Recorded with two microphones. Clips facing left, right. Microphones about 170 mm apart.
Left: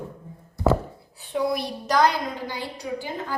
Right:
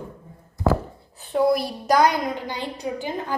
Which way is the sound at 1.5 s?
5° right (ahead or behind).